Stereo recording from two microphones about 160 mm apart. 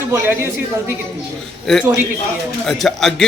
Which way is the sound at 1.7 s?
Centre (ahead or behind).